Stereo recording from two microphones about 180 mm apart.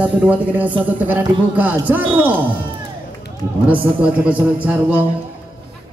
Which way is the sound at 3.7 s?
10° right (ahead or behind).